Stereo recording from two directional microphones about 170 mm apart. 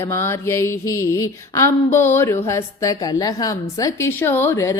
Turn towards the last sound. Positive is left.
turn(degrees=15)  # may be behind; listen again after turning